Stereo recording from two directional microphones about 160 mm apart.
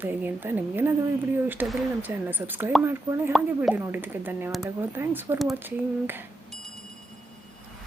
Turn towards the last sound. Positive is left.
turn(degrees=-15)  # may be behind; listen again after turning